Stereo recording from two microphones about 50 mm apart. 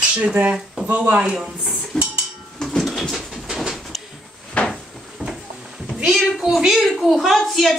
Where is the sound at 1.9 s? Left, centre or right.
Centre.